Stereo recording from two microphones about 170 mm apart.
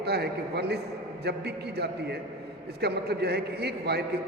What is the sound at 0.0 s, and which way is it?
A man's voice, 70° right (ahead or behind).